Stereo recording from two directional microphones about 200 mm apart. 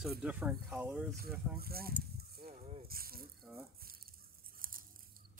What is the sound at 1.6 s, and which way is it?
Speech, 50° right (ahead or behind).